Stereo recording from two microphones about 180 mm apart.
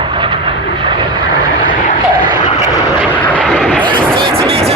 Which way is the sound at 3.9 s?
25° right (ahead or behind).